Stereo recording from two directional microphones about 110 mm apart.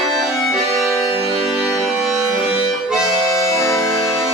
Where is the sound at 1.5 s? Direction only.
5° right (ahead or behind).